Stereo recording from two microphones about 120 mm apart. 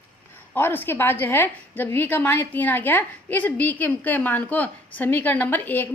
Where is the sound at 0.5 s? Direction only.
15° left (ahead or behind).